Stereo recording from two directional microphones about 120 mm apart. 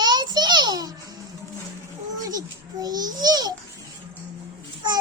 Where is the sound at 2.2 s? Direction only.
30° right (ahead or behind).